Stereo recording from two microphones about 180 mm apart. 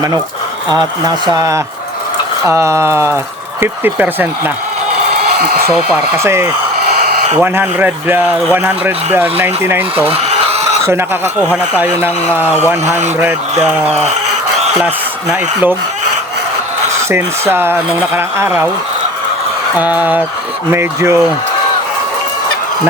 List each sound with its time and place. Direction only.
0.7 s speech: 20° right (ahead or behind)
5.4 s speech: 60° right (ahead or behind)
6.1 s speech: 15° right (ahead or behind)
10.1 s a sound: 35° right (ahead or behind)
10.8 s speech: 15° right (ahead or behind)
14.8 s speech: 10° right (ahead or behind)
17.1 s speech: 15° right (ahead or behind)
19.7 s speech: 10° right (ahead or behind)